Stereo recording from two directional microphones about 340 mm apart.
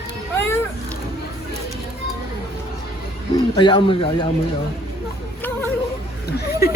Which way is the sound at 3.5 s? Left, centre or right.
Centre.